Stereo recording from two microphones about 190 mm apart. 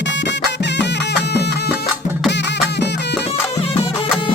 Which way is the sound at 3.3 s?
30° left (ahead or behind).